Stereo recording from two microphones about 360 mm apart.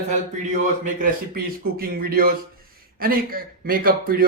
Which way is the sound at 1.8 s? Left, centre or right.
Right.